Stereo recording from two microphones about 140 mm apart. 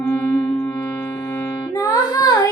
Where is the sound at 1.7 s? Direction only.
25° left (ahead or behind).